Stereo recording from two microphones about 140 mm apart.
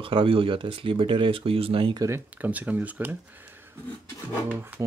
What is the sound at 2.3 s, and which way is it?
Speech, 10° right (ahead or behind).